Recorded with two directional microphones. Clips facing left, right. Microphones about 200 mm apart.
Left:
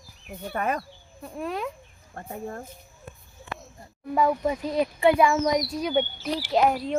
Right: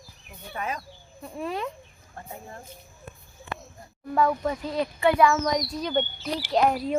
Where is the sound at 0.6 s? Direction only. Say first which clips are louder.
Left 5 dB; 55° left (ahead or behind).